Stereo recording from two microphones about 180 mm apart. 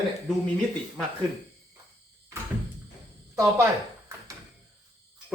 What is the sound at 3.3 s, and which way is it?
Speech, 20° right (ahead or behind).